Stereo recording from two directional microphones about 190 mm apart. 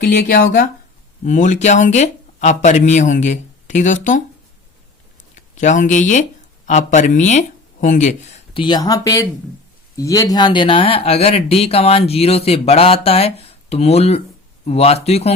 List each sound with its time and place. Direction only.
0.0 s speech: 50° left (ahead or behind)
5.3 s speech: 40° left (ahead or behind)
8.6 s speech: 20° left (ahead or behind)